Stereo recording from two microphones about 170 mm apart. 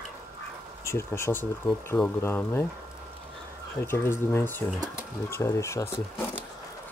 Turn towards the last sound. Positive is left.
turn(degrees=15)  # may be behind; listen again after turning